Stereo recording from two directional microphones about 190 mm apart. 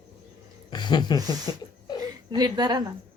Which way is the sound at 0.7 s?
25° left (ahead or behind).